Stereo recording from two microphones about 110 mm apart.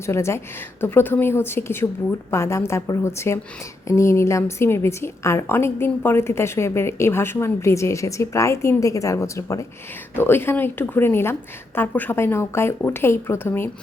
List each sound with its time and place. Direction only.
0.0 s a woman's voice: 25° left (ahead or behind)